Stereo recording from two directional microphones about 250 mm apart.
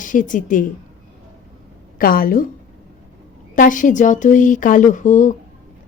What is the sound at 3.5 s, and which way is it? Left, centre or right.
Speech, left.